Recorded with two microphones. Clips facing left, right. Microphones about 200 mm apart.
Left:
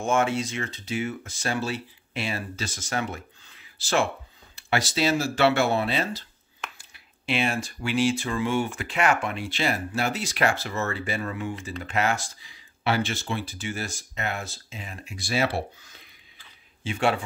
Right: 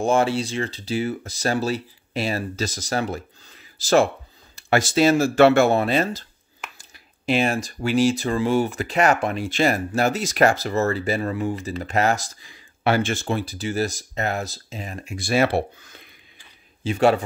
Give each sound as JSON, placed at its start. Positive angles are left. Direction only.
{"t": 0.0, "sound": "speech", "side_deg": -35}
{"t": 16.8, "sound": "speech", "side_deg": -40}